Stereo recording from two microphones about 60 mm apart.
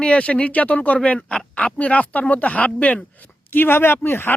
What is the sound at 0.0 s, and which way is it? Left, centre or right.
Speech, centre.